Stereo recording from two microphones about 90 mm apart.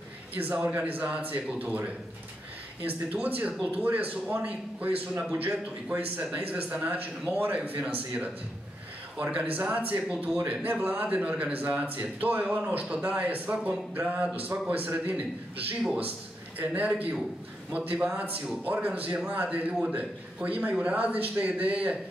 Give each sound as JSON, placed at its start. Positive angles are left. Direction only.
{"t": 0.3, "sound": "a man's voice", "side_deg": -20}
{"t": 9.1, "sound": "a man's voice", "side_deg": -15}
{"t": 16.5, "sound": "a man's voice", "side_deg": -15}